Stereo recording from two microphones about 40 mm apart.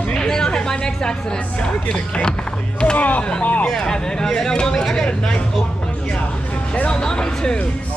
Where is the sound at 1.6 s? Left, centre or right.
Left.